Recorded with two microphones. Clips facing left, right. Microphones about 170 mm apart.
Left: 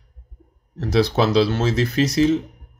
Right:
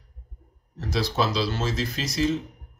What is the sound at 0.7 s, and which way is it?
Speech, 60° left (ahead or behind).